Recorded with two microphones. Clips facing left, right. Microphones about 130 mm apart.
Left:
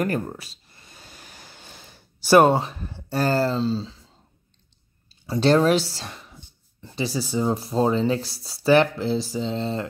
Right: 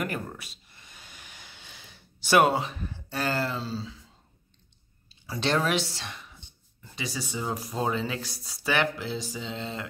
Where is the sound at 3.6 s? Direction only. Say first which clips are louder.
Left 10 dB; 25° left (ahead or behind).